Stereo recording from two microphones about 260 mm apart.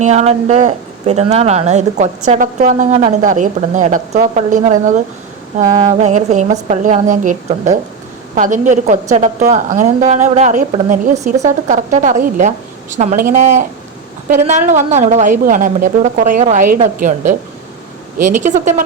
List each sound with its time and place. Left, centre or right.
0.0 s speech: right
18.4 s speech: right